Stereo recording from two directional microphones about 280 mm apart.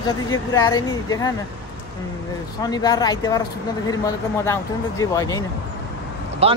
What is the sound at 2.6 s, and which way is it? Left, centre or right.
Speech, centre.